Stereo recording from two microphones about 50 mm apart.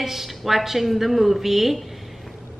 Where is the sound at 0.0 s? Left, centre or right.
Centre.